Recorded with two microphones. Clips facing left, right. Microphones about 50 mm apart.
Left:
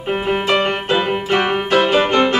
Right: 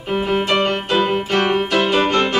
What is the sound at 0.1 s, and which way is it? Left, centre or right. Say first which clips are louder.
Music: left 1 dB; left.